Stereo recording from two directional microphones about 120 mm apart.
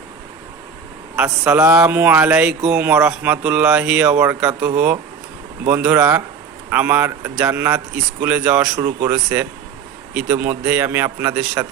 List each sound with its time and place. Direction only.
1.5 s speech: 25° right (ahead or behind); by 11.6 s 10° right (ahead or behind)